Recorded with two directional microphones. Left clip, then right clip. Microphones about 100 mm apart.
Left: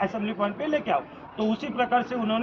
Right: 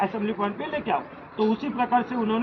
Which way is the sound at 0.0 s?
15° left (ahead or behind).